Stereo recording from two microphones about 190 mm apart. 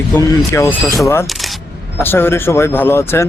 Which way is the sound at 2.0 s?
10° left (ahead or behind).